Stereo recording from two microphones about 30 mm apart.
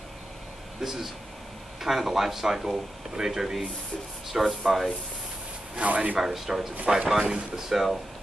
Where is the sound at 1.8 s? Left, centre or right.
Centre.